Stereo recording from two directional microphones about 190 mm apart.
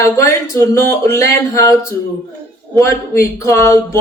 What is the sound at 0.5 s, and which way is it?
Speech, 15° left (ahead or behind).